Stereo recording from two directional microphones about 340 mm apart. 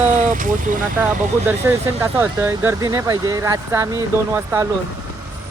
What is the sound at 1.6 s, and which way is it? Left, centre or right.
Speech, centre.